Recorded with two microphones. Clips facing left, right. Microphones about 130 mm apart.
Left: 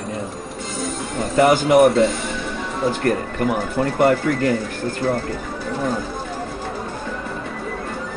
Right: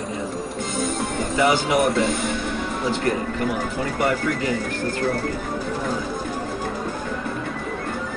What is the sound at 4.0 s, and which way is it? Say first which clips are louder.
Speech: left 6 dB; 50° left (ahead or behind).